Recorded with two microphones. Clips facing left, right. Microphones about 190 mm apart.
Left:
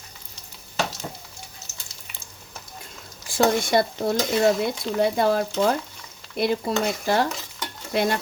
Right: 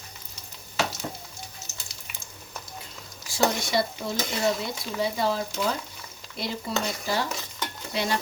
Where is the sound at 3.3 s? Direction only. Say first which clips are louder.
Left 5 dB; 55° left (ahead or behind).